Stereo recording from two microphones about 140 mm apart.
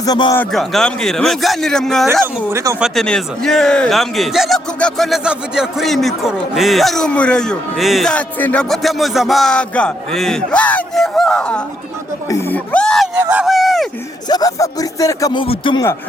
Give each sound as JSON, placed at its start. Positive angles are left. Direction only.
{"t": 0.0, "sound": "speech", "side_deg": 30}
{"t": 0.5, "sound": "a man's voice", "side_deg": 0}
{"t": 2.2, "sound": "speech", "side_deg": -20}
{"t": 2.8, "sound": "a man's voice", "side_deg": 5}
{"t": 8.7, "sound": "a man's voice", "side_deg": 0}
{"t": 14.3, "sound": "speech", "side_deg": 25}